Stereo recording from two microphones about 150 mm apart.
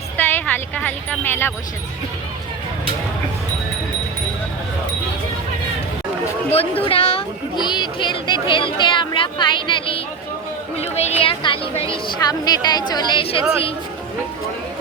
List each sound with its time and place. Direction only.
0.2 s a sound: 10° left (ahead or behind)
6.5 s a woman's voice: 40° left (ahead or behind)
7.5 s a woman's voice: 30° left (ahead or behind)